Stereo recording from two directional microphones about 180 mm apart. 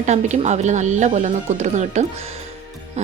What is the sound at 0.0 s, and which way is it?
Speech, 40° right (ahead or behind).